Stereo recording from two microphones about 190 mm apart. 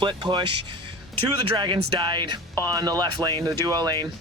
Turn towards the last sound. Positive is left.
turn(degrees=-20)  # may be behind; listen again after turning